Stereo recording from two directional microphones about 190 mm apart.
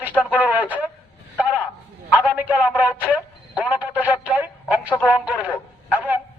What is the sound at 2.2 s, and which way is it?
A man's voice, 5° right (ahead or behind).